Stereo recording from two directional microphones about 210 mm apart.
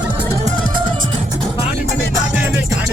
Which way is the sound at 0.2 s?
25° right (ahead or behind).